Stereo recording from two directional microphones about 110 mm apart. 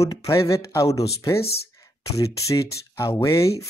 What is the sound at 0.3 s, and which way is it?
Speech, 30° left (ahead or behind).